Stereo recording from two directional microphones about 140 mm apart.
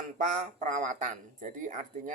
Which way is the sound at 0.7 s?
65° right (ahead or behind).